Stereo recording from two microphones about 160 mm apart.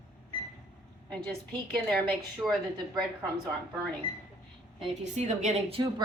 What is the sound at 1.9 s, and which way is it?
Speech, centre (ahead or behind).